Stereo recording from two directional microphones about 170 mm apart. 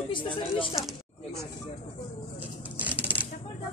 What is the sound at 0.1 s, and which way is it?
Speech, 30° left (ahead or behind).